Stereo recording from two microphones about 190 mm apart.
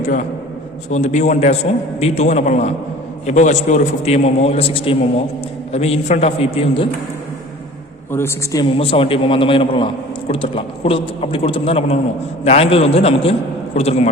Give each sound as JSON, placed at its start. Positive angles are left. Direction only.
{"t": 0.0, "sound": "a man's voice", "side_deg": 45}
{"t": 8.1, "sound": "a woman's voice", "side_deg": 15}
{"t": 8.8, "sound": "a man's voice", "side_deg": 30}